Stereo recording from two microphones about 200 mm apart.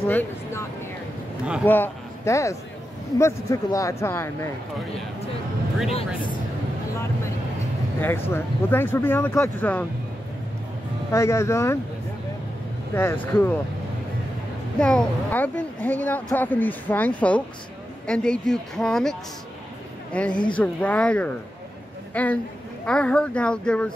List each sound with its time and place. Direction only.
0.0 s speech: 10° left (ahead or behind)
1.7 s speech: 10° left (ahead or behind)
5.9 s speech: 30° left (ahead or behind)
8.0 s speech: 10° left (ahead or behind)
11.1 s speech: 15° left (ahead or behind)
12.9 s speech: 10° left (ahead or behind)
14.8 s a woman's voice: 5° left (ahead or behind)